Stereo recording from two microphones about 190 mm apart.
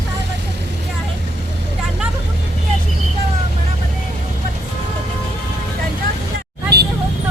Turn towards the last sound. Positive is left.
turn(degrees=-60)  # may be behind; listen again after turning